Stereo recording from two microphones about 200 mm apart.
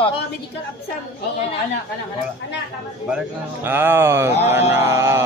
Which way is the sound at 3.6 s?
10° right (ahead or behind).